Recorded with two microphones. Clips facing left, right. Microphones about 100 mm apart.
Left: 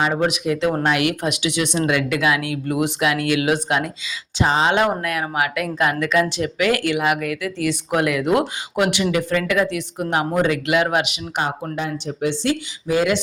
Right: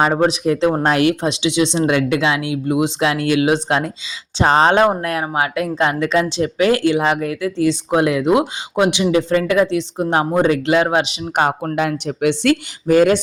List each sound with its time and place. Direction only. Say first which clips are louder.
0.0 s speech: right 5 dB; 35° right (ahead or behind)
4.4 s speech: right 5 dB; 50° right (ahead or behind)
4.7 s speech: right 4 dB; 30° right (ahead or behind)
11.3 s speech: right 6 dB; 55° right (ahead or behind)
11.8 s speech: right 5 dB; 70° right (ahead or behind); by 13.1 s 50° right (ahead or behind)